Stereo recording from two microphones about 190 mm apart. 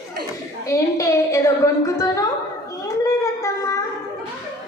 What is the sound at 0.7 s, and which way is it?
A woman's voice, 15° left (ahead or behind).